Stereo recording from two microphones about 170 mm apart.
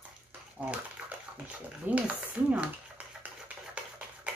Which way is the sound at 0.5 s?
10° right (ahead or behind).